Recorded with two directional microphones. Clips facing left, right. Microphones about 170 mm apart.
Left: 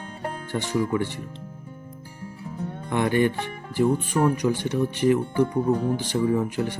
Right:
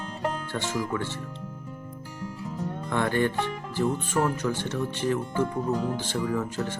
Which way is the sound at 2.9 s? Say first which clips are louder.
Left 4 dB; 15° left (ahead or behind).